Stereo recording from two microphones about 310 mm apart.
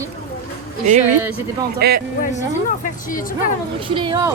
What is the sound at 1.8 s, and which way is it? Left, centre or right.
Speech, right.